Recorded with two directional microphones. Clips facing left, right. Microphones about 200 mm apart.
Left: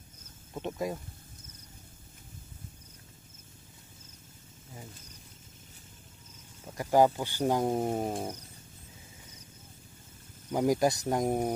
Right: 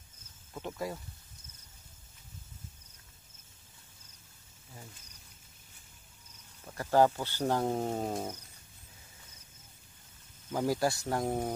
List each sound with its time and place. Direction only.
0.6 s speech: 20° left (ahead or behind)
6.6 s speech: 15° left (ahead or behind)
10.5 s speech: 20° left (ahead or behind)